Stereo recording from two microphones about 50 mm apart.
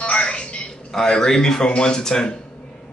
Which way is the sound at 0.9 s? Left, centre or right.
Centre.